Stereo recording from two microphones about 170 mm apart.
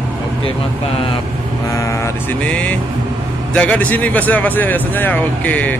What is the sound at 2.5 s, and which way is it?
Speech, 5° left (ahead or behind).